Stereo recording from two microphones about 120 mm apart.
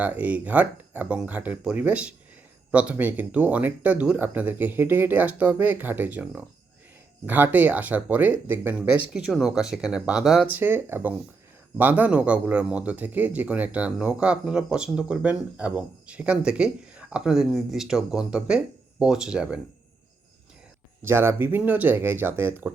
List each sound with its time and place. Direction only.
0.0 s a man's voice: 15° right (ahead or behind)
9.1 s speech: 5° right (ahead or behind)
10.5 s a man's voice: 15° right (ahead or behind)
21.0 s a man's voice: 20° right (ahead or behind)